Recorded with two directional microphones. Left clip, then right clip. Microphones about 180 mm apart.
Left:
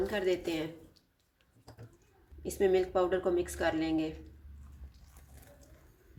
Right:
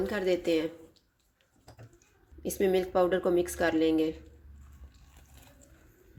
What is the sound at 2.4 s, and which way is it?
Speech, 40° right (ahead or behind).